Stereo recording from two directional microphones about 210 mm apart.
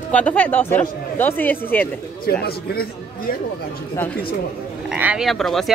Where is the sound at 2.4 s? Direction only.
45° left (ahead or behind).